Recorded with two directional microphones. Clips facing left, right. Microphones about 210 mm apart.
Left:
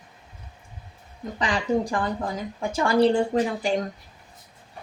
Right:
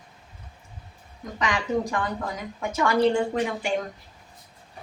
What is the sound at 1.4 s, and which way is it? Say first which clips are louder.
A woman's voice: left 2 dB; 30° left (ahead or behind).